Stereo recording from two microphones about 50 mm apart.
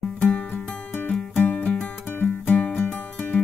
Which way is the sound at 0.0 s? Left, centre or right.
Left.